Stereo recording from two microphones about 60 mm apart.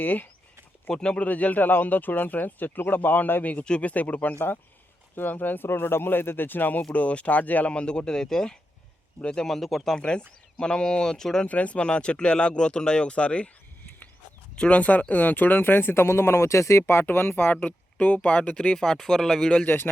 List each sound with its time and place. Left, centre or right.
0.0 s speech: left
0.9 s speech: centre
10.0 s speech: centre
11.4 s speech: left
14.5 s speech: centre; by 16.8 s left
16.8 s speech: left; by 19.6 s centre
19.6 s speech: left